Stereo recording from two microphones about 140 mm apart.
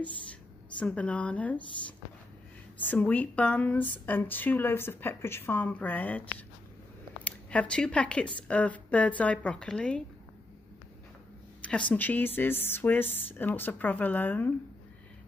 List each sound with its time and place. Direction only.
0.3 s speech: 10° left (ahead or behind)
11.6 s speech: 10° left (ahead or behind)